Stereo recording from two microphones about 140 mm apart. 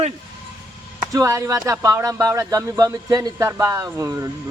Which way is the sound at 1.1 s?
20° right (ahead or behind).